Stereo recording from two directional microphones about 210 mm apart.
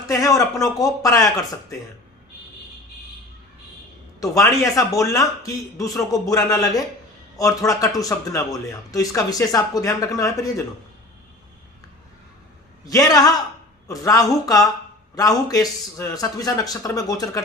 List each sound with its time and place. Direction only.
0.1 s speech: 15° left (ahead or behind)
4.2 s speech: 15° left (ahead or behind)
12.8 s speech: 15° left (ahead or behind)